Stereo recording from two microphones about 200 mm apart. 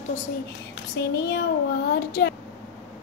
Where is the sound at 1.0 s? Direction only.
55° left (ahead or behind).